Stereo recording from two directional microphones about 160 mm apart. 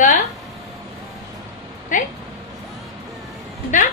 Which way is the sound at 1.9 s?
55° left (ahead or behind).